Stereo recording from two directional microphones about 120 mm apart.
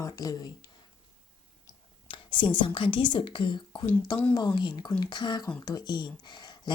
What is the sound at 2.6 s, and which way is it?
A woman's voice, 45° left (ahead or behind).